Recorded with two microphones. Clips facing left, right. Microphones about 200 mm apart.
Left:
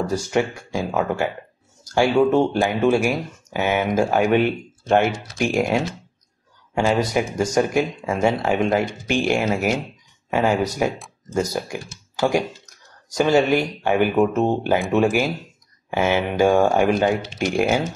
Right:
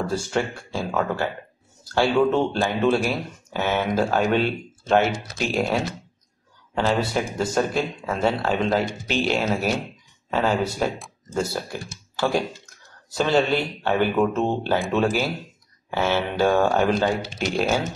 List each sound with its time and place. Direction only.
0.1 s speech: 15° left (ahead or behind)